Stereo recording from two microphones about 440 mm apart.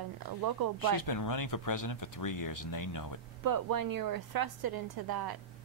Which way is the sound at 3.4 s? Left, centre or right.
Right.